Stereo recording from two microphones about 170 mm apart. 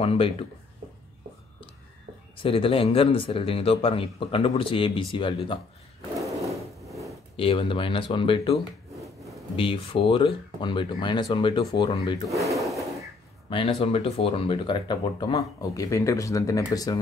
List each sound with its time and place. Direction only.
0.0 s speech: 35° left (ahead or behind)
2.3 s speech: 30° left (ahead or behind)
7.3 s speech: 30° left (ahead or behind)
8.9 s a sound: centre (ahead or behind)
9.6 s speech: 30° left (ahead or behind)
12.5 s a sound: centre (ahead or behind)
13.5 s speech: 30° left (ahead or behind)